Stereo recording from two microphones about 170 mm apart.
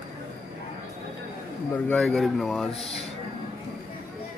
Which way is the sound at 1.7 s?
10° left (ahead or behind).